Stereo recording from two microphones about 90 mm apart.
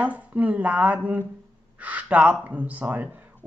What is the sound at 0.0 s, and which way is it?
Speech, 15° right (ahead or behind).